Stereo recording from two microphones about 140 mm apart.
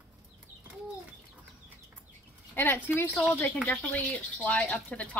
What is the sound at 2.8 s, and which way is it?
Speech, 15° left (ahead or behind).